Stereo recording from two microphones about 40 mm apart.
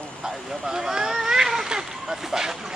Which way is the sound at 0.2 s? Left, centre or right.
Centre.